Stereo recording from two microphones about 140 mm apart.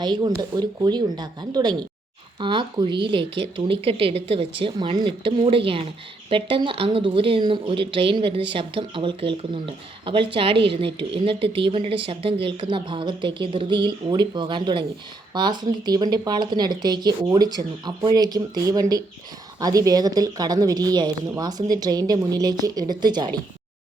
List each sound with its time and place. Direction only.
0.0 s speech: 30° right (ahead or behind)